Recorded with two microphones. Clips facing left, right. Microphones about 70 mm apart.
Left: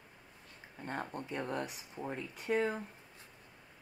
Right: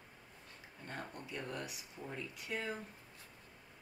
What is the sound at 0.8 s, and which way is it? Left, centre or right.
Speech, left.